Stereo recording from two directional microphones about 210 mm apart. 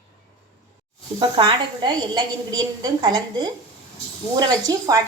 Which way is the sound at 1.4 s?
20° right (ahead or behind).